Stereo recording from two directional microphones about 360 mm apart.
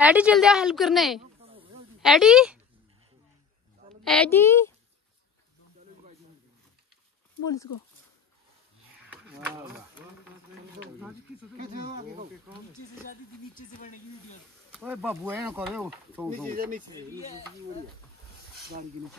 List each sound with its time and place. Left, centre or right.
0.0 s speech: centre
1.4 s a sound: centre
2.0 s speech: centre
4.0 s a woman's voice: centre
9.1 s a sound: centre
11.5 s speech: right
13.1 s speech: left
14.7 s speech: centre
16.5 s speech: right